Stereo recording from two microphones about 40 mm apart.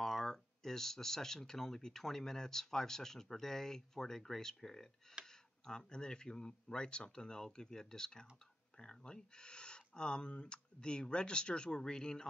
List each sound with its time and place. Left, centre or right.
0.0 s speech: centre
5.2 s a sound: right
5.7 s speech: centre